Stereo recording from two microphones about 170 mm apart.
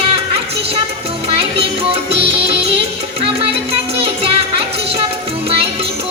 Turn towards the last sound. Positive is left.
turn(degrees=-35)  # may be behind; listen again after turning